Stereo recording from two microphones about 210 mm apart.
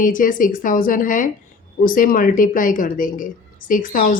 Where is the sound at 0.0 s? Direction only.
40° left (ahead or behind).